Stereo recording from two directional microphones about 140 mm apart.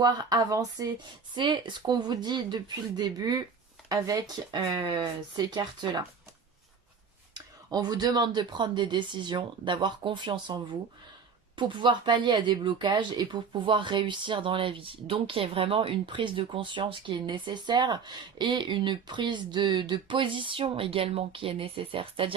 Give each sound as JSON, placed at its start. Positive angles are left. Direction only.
{"t": 0.0, "sound": "speech", "side_deg": -25}
{"t": 7.3, "sound": "speech", "side_deg": -30}